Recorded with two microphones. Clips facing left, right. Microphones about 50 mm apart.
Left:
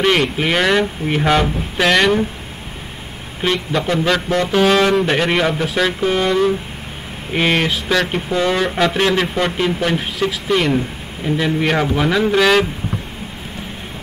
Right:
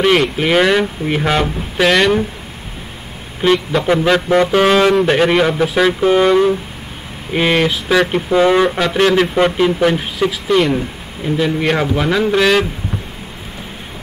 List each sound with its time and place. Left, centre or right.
0.0 s speech: centre
3.4 s speech: centre
3.8 s music: centre
4.8 s speech: centre
8.4 s music: centre
8.6 s speech: centre